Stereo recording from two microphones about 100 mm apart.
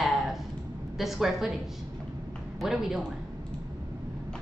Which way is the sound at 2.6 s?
5° right (ahead or behind).